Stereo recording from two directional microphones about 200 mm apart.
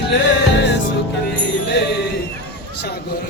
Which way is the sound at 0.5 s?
60° left (ahead or behind).